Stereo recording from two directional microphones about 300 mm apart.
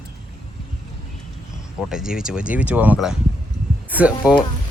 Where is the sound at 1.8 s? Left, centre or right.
Centre.